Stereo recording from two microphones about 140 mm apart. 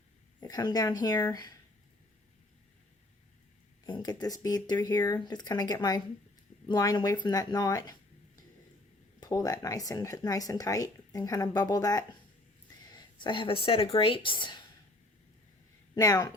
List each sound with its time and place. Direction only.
0.4 s speech: 30° left (ahead or behind)
3.8 s speech: 30° left (ahead or behind)
9.2 s speech: 25° left (ahead or behind)
16.0 s speech: 25° left (ahead or behind)